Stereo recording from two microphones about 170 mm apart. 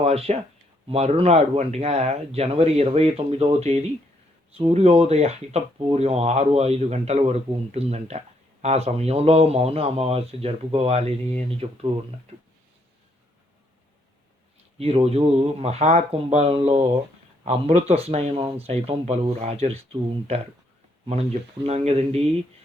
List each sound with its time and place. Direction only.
0.0 s speech: 35° right (ahead or behind)
14.8 s speech: 35° right (ahead or behind)